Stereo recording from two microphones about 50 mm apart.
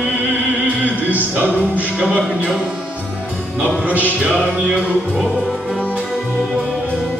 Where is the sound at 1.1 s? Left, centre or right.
Right.